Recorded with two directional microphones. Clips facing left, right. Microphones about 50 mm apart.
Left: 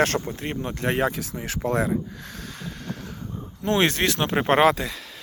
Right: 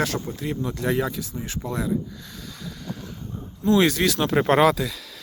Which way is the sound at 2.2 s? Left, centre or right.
Left.